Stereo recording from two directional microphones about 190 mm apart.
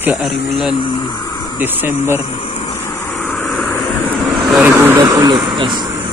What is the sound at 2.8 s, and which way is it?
Vehicle, 10° left (ahead or behind).